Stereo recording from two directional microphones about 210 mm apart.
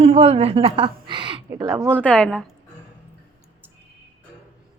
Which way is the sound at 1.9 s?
5° left (ahead or behind).